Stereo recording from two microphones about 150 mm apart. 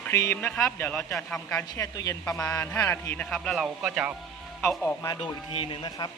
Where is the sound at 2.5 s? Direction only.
10° left (ahead or behind).